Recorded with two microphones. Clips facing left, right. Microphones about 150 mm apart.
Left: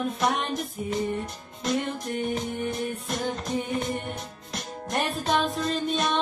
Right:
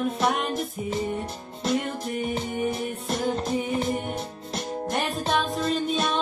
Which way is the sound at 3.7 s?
30° right (ahead or behind).